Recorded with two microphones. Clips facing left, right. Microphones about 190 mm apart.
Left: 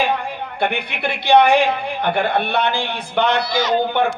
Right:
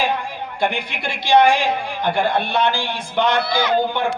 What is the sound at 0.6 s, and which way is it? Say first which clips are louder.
A man's voice: left 1 dB; 60° left (ahead or behind).